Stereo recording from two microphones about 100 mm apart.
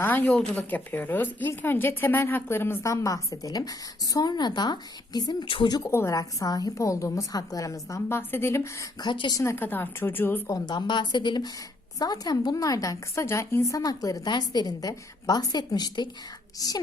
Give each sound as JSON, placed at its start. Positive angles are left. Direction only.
{"t": 0.0, "sound": "a woman's voice", "side_deg": 20}
{"t": 5.6, "sound": "a woman's voice", "side_deg": 40}
{"t": 5.9, "sound": "a woman's voice", "side_deg": 25}
{"t": 9.0, "sound": "speech", "side_deg": 50}
{"t": 9.4, "sound": "a woman's voice", "side_deg": 25}
{"t": 10.4, "sound": "a woman's voice", "side_deg": 40}